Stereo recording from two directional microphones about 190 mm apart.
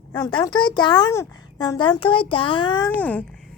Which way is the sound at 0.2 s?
20° left (ahead or behind).